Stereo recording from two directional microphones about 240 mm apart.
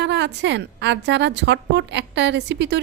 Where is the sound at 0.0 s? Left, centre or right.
Right.